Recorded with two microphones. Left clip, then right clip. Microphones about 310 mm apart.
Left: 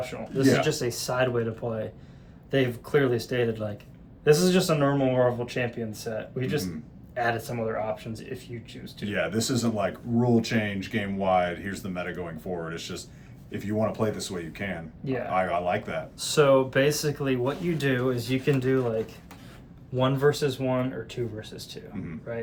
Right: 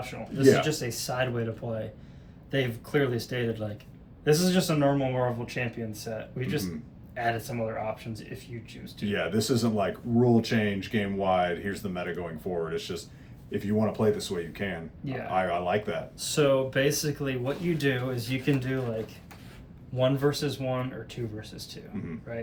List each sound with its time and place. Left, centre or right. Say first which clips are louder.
0.0 s speech: right 2 dB; centre
9.0 s speech: even; centre
16.1 s speech: left 4 dB; centre